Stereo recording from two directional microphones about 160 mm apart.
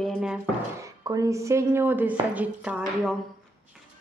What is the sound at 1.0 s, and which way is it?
Speech, 20° right (ahead or behind).